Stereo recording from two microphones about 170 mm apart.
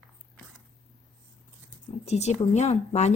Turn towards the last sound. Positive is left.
turn(degrees=40)  # may be behind; listen again after turning